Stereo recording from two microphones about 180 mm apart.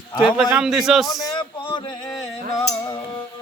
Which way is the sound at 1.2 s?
25° left (ahead or behind).